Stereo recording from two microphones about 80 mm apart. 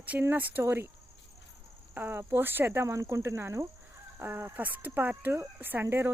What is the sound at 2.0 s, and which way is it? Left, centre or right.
Speech, right.